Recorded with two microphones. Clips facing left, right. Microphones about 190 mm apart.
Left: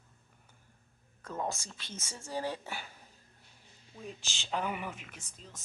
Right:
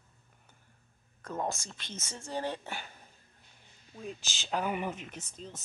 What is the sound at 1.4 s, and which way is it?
Speech, 10° left (ahead or behind).